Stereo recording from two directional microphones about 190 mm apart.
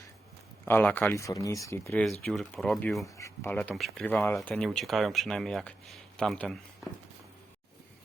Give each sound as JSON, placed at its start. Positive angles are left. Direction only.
{"t": 0.6, "sound": "speech", "side_deg": 10}
{"t": 3.2, "sound": "speech", "side_deg": 15}